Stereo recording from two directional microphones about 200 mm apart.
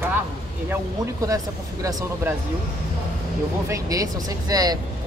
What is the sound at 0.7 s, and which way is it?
Speech, 15° right (ahead or behind).